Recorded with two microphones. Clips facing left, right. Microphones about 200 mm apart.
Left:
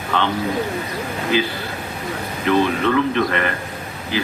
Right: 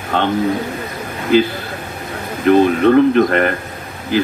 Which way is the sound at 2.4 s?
45° right (ahead or behind).